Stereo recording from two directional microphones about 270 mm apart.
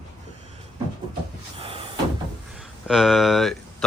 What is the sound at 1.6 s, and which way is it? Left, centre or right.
Cupboard open or close, right.